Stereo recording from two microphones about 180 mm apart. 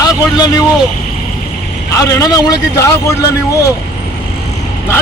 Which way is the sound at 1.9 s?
20° left (ahead or behind).